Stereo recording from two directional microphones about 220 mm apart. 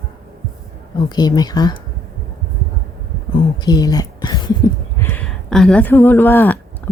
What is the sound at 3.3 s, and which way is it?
Speech, 20° left (ahead or behind).